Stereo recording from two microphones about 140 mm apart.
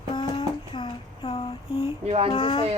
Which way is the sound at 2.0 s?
45° right (ahead or behind).